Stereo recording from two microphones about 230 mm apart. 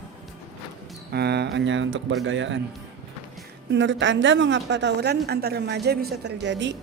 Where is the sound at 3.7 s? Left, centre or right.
Right.